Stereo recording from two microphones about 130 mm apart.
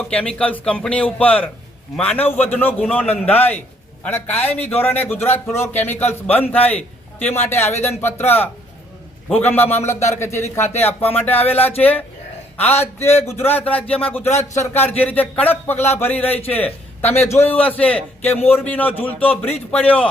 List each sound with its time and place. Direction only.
0.1 s a man's voice: 10° left (ahead or behind)
11.5 s speech: 50° left (ahead or behind)
11.8 s a man's voice: 15° left (ahead or behind)
17.3 s a man's voice: 15° left (ahead or behind)